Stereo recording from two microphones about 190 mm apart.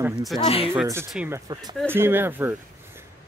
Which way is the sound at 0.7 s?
15° right (ahead or behind).